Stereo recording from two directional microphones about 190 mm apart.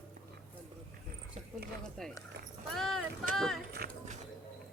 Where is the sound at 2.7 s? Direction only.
Centre (ahead or behind).